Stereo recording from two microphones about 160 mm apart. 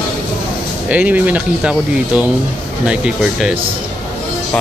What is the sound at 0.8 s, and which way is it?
Speech, 10° right (ahead or behind).